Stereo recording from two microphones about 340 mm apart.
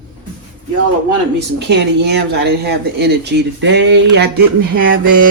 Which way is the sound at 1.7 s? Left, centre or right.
Right.